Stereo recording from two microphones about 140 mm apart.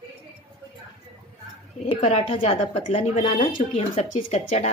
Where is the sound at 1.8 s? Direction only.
50° left (ahead or behind).